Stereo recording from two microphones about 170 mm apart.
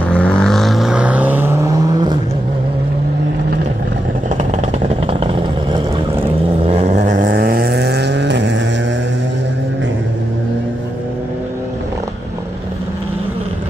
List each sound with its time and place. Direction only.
0.1 s vehicle: 5° left (ahead or behind); by 1.8 s 10° right (ahead or behind)
5.0 s vehicle: 30° right (ahead or behind)
6.7 s a sound: 40° right (ahead or behind)
7.2 s vehicle: 75° right (ahead or behind); by 8.5 s 90° right